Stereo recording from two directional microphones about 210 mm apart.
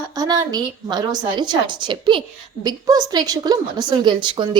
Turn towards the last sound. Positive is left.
turn(degrees=-20)  # may be behind; listen again after turning